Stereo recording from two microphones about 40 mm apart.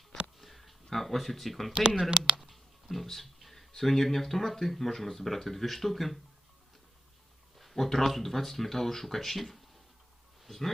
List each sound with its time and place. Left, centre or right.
0.3 s a sound: centre
2.0 s speech: right
2.4 s clicking: centre
3.7 s speech: centre
7.6 s speech: centre